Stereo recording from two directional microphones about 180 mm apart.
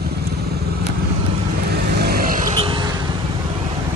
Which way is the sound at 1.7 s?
60° right (ahead or behind).